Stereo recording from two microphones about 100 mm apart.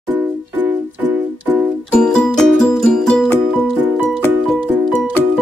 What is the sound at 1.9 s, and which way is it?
Music, 5° left (ahead or behind).